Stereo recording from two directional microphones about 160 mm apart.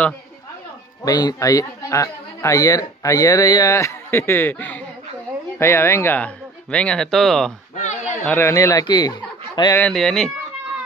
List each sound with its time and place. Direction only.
1.0 s speech: 25° left (ahead or behind); by 7.5 s centre (ahead or behind)
7.7 s a sound: 45° left (ahead or behind)
8.3 s speech: 15° left (ahead or behind)
9.8 s speech: 5° left (ahead or behind)